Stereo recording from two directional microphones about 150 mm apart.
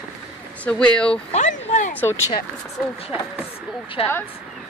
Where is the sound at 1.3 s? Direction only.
50° left (ahead or behind).